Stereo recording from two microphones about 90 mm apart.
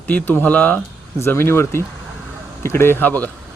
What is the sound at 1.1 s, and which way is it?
Speech, 30° left (ahead or behind).